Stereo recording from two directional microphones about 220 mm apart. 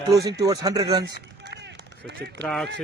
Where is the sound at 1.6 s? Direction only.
50° right (ahead or behind).